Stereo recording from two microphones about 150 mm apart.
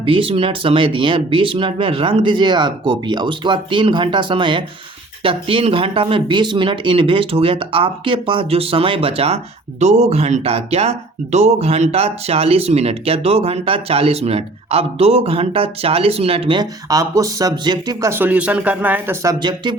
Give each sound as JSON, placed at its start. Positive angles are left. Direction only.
{"t": 0.0, "sound": "speech", "side_deg": -35}
{"t": 16.9, "sound": "speech", "side_deg": -20}
{"t": 18.1, "sound": "speech", "side_deg": -10}
{"t": 19.2, "sound": "speech", "side_deg": -25}